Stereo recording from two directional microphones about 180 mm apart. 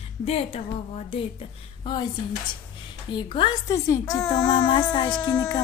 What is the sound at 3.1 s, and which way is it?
Speech, 25° left (ahead or behind).